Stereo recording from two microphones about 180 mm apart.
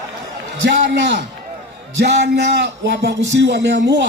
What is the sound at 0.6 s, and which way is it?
A man's voice, 80° right.